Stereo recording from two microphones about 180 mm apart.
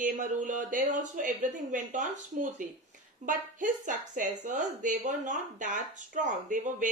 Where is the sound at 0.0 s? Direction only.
45° right (ahead or behind).